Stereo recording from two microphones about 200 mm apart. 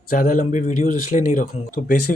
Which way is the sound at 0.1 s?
45° left (ahead or behind).